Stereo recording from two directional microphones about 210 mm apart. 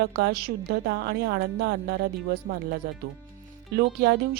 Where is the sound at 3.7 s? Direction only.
50° right (ahead or behind).